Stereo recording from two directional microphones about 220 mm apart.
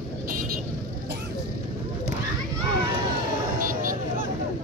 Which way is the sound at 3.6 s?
40° right (ahead or behind).